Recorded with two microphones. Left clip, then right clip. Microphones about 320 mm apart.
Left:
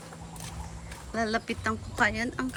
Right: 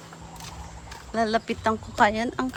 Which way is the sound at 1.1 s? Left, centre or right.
Centre.